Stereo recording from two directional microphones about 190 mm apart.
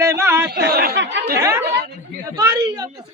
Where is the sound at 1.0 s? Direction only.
65° right (ahead or behind).